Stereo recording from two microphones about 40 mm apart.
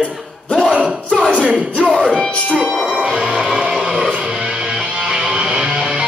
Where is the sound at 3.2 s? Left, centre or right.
Centre.